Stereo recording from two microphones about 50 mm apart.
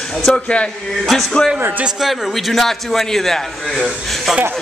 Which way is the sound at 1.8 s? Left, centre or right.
Centre.